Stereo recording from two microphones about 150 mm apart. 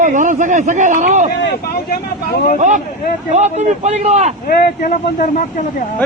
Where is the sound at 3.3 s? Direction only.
50° right (ahead or behind).